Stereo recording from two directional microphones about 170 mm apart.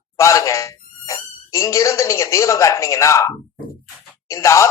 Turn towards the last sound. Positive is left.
turn(degrees=15)  # may be behind; listen again after turning